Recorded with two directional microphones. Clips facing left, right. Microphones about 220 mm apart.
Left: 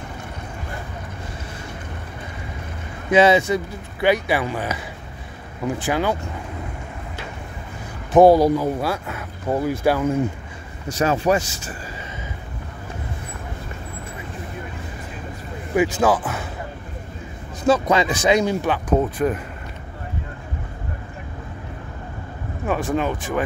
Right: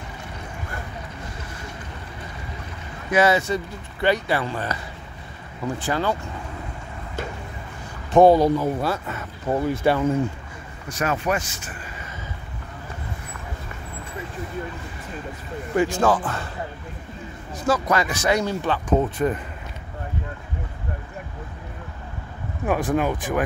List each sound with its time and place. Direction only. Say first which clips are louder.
3.1 s speech: left 4 dB; 20° left (ahead or behind)
5.9 s speech: left 2 dB; 15° left (ahead or behind)
8.1 s speech: left 2 dB; 5° left (ahead or behind)
10.9 s speech: left 5 dB; 30° left (ahead or behind)
15.7 s speech: left 2 dB; 5° left (ahead or behind)
17.6 s speech: left 4 dB; 25° left (ahead or behind)
18.9 s speech: left 1 dB; centre (ahead or behind)
22.7 s speech: even; 10° right (ahead or behind)